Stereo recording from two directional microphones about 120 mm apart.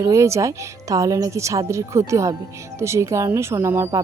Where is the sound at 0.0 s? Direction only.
25° right (ahead or behind).